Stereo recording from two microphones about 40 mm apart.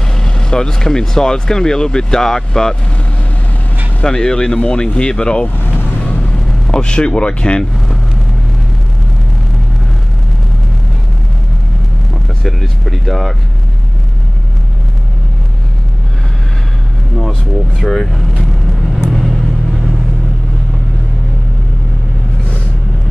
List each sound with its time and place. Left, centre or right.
0.2 s speech: centre
4.0 s speech: centre
6.0 s vehicle: left
12.4 s speech: centre
17.2 s speech: centre
18.9 s vehicle: centre